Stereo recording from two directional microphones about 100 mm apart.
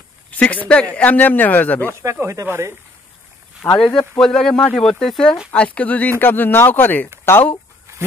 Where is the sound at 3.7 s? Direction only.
5° left (ahead or behind).